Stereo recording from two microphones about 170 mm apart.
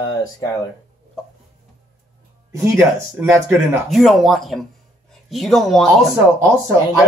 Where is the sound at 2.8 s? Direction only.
15° right (ahead or behind).